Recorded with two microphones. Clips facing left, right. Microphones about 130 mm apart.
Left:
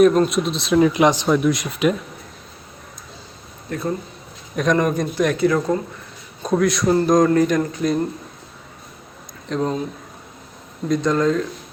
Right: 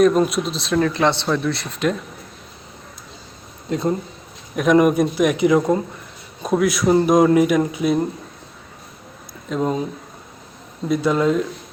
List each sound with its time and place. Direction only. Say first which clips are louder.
0.2 s speech: left 1 dB; centre (ahead or behind)
0.8 s speech: left 3 dB; 10° left (ahead or behind)
3.7 s speech: right 4 dB; 20° right (ahead or behind)
4.5 s a man's voice: right 4 dB; 10° right (ahead or behind)
6.4 s a man's voice: even; 5° right (ahead or behind)
9.5 s a man's voice: right 1 dB; 10° right (ahead or behind)
10.8 s a man's voice: even; 5° right (ahead or behind)